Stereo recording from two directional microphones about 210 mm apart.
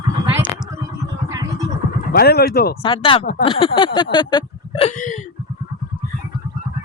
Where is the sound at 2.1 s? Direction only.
50° left (ahead or behind).